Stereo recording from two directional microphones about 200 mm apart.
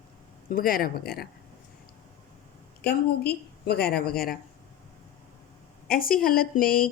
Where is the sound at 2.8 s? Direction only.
55° left (ahead or behind).